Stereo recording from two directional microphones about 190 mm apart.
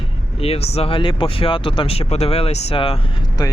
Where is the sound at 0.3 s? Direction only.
30° left (ahead or behind).